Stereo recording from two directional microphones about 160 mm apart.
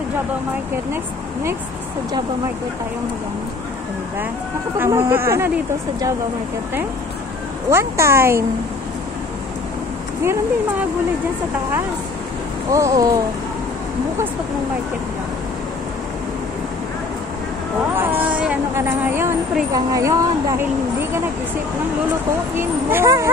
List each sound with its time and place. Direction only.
4.7 s speech: 15° right (ahead or behind)
7.7 s speech: 15° right (ahead or behind)
12.7 s a woman's voice: 20° right (ahead or behind)
17.9 s a sound: 10° right (ahead or behind)
18.8 s a woman's voice: 15° right (ahead or behind)
22.6 s speech: 15° right (ahead or behind)